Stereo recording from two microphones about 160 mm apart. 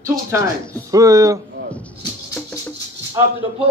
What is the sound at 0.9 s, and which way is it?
Speech, 20° right (ahead or behind).